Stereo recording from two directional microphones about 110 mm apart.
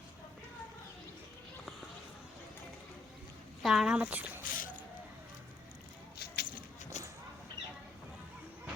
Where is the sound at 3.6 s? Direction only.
5° right (ahead or behind).